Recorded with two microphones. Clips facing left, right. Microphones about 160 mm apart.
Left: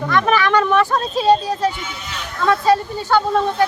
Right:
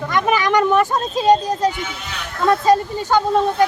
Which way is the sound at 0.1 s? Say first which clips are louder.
Left 1 dB; 15° right (ahead or behind).